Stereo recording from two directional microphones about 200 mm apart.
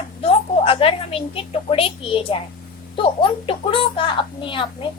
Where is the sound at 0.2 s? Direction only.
30° left (ahead or behind).